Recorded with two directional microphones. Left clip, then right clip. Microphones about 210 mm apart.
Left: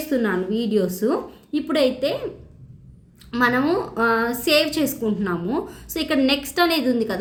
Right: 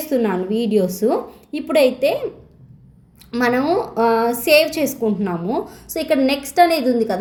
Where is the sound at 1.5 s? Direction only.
45° left (ahead or behind).